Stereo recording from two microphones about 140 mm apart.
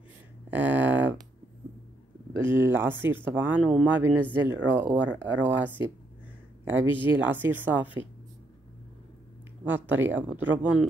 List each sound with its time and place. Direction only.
0.5 s a sound: 10° right (ahead or behind)
2.4 s speech: 15° right (ahead or behind)
6.9 s speech: 35° left (ahead or behind)
7.2 s speech: 15° right (ahead or behind)
9.7 s speech: 15° right (ahead or behind)